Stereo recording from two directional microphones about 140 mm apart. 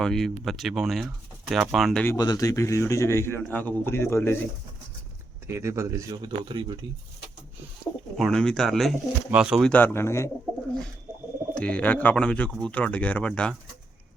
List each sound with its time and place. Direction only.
0.0 s speech: 5° left (ahead or behind)
2.0 s a man's voice: 25° left (ahead or behind)
5.5 s speech: 20° right (ahead or behind)
8.1 s speech: 5° left (ahead or behind)
9.6 s a man's voice: 10° left (ahead or behind)
11.5 s a man's voice: 10° left (ahead or behind)